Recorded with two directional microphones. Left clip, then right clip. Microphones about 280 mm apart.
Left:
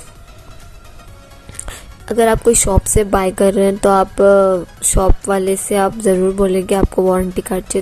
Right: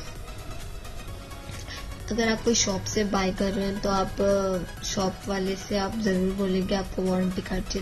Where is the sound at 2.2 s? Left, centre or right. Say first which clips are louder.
Left 12 dB; left.